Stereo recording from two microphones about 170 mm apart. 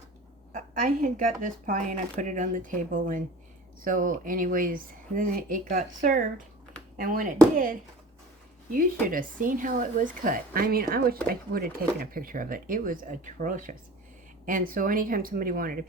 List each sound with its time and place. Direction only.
0.5 s speech: 55° right (ahead or behind)